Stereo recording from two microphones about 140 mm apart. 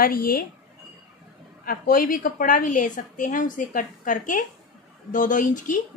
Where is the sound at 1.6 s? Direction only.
90° left.